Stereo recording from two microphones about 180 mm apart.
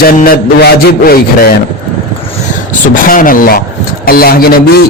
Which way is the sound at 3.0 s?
50° left (ahead or behind).